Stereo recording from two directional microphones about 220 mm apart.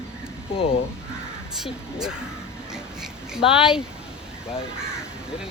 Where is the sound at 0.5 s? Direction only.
25° left (ahead or behind).